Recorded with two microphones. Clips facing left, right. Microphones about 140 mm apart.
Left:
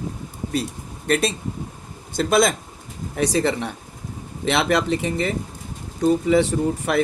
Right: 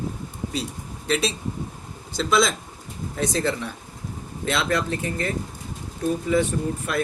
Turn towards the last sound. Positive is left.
turn(degrees=75)  # may be behind; listen again after turning